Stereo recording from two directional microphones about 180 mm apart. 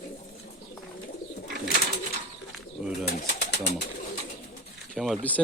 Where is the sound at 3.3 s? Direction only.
60° left (ahead or behind).